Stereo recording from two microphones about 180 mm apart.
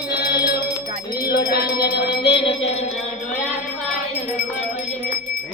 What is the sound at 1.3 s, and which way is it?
Music, 60° left (ahead or behind).